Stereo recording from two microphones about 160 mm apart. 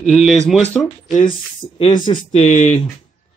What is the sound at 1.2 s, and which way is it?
Speech, 30° left (ahead or behind).